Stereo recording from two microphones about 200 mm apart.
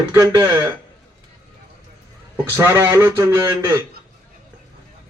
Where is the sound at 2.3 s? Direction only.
10° right (ahead or behind).